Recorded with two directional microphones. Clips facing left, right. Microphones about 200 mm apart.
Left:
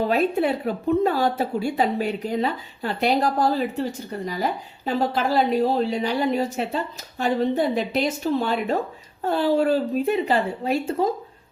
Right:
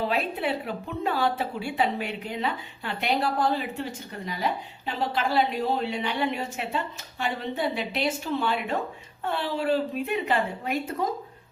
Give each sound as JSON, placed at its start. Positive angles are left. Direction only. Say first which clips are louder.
{"t": 0.0, "sound": "a woman's voice", "louder": "left 7 dB", "side_deg": 45}
{"t": 4.9, "sound": "a woman's voice", "louder": "left 5 dB", "side_deg": 40}